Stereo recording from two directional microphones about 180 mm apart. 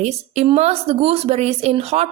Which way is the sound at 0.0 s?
35° right (ahead or behind).